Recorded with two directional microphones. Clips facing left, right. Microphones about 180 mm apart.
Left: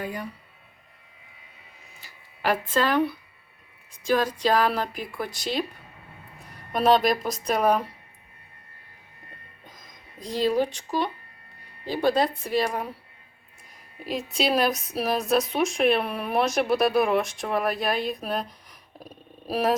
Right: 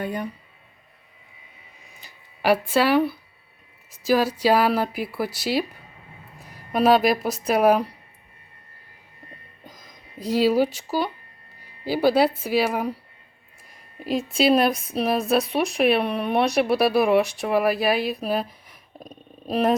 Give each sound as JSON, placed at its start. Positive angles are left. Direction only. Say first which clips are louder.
{"t": 0.0, "sound": "speech", "louder": "right 4 dB", "side_deg": -25}
{"t": 2.0, "sound": "speech", "louder": "right 4 dB", "side_deg": -15}
{"t": 10.2, "sound": "speech", "louder": "right 4 dB", "side_deg": -5}
{"t": 14.0, "sound": "speech", "louder": "right 5 dB", "side_deg": 0}
{"t": 19.0, "sound": "speech", "louder": "right 2 dB", "side_deg": 10}